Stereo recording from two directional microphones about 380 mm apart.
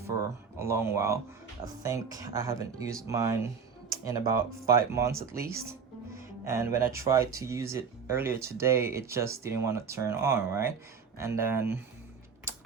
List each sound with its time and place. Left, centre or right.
0.6 s speech: centre